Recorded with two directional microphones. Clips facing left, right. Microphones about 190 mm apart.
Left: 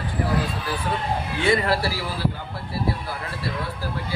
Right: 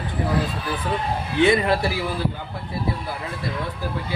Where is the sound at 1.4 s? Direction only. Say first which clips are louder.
Right 4 dB; 20° right (ahead or behind).